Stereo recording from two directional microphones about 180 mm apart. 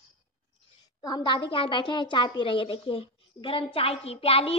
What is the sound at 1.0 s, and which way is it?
A woman's voice, 25° left (ahead or behind).